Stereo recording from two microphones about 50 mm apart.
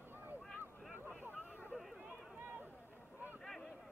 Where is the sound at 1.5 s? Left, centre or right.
Left.